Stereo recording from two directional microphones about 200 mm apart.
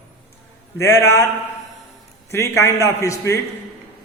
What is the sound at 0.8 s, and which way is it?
Speech, 15° left (ahead or behind).